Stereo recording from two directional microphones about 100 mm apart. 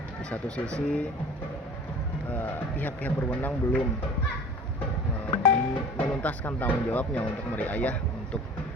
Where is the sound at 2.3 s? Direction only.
15° left (ahead or behind).